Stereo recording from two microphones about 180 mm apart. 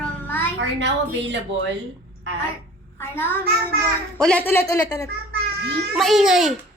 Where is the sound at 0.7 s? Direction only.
85° right.